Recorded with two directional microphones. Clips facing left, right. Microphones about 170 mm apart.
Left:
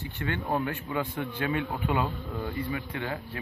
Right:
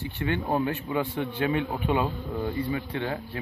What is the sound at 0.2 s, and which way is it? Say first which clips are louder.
A man's voice: right 3 dB; 20° right (ahead or behind).